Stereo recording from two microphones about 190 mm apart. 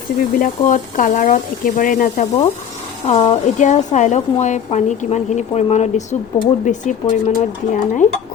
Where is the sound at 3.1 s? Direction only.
30° left (ahead or behind).